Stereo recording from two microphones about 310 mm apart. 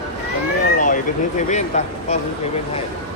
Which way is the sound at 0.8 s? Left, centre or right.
Left.